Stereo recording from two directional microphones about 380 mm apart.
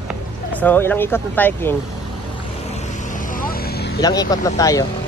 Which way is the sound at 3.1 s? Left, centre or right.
Left.